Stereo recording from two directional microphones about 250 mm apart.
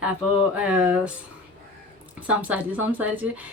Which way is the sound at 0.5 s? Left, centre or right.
Centre.